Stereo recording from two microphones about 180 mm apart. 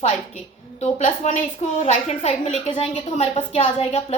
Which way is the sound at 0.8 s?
40° left (ahead or behind).